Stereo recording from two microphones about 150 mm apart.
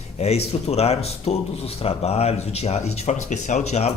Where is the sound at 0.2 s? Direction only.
45° left (ahead or behind).